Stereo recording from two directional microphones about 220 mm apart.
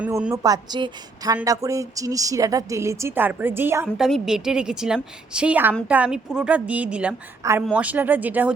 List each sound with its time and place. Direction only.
0.0 s a woman's voice: 5° right (ahead or behind)
0.4 s a woman's voice: 20° right (ahead or behind)